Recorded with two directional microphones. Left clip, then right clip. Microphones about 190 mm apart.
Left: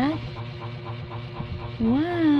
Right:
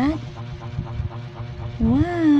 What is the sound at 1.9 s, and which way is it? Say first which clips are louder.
Speech: right 3 dB; 15° right (ahead or behind).